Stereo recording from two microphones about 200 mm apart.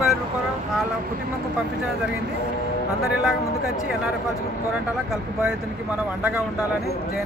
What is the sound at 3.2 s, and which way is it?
Speech, centre (ahead or behind).